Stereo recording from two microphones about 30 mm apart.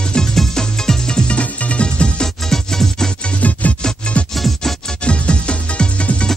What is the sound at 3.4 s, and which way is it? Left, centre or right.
Music, left.